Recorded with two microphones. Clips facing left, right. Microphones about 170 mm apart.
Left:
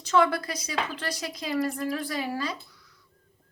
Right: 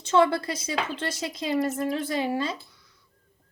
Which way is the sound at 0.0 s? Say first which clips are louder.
Right 2 dB; 25° right (ahead or behind).